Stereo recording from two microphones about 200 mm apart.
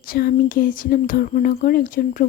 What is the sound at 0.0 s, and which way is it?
Speech, 45° left (ahead or behind).